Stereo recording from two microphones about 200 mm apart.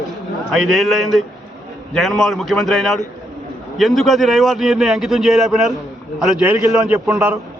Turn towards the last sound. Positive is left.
turn(degrees=-10)  # may be behind; listen again after turning